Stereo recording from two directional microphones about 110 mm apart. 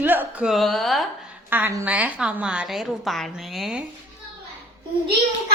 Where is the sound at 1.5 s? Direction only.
20° right (ahead or behind); by 3.8 s centre (ahead or behind).